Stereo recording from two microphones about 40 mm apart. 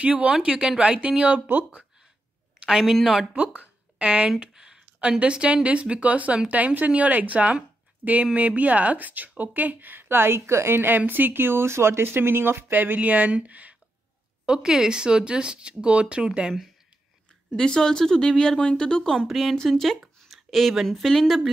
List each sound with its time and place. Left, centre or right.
0.0 s speech: right
1.5 s speech: right
2.6 s speech: centre
4.0 s speech: right
4.6 s speech: centre; by 11.0 s right
11.0 s speech: right
12.7 s speech: right
14.4 s speech: centre
17.6 s speech: centre
19.5 s speech: centre
20.0 s a sound: centre
20.8 s speech: centre